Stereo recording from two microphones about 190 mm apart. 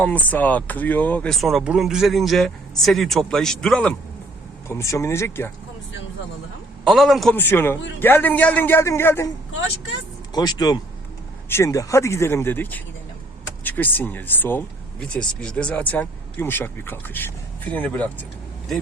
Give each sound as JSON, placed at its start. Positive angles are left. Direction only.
{"t": 0.0, "sound": "speech", "side_deg": 10}
{"t": 4.7, "sound": "speech", "side_deg": 15}
{"t": 6.8, "sound": "speech", "side_deg": 0}
{"t": 7.3, "sound": "speech", "side_deg": 10}
{"t": 10.3, "sound": "speech", "side_deg": 20}